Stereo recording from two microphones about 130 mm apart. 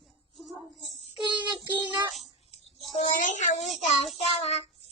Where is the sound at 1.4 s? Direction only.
15° right (ahead or behind).